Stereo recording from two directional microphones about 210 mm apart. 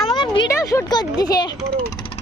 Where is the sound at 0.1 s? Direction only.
20° left (ahead or behind).